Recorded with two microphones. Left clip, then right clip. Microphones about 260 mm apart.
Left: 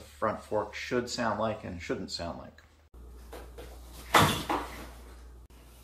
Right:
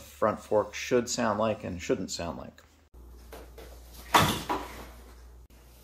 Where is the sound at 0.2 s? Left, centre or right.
Right.